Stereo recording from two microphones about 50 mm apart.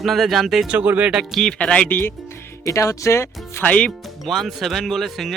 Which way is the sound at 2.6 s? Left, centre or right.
Left.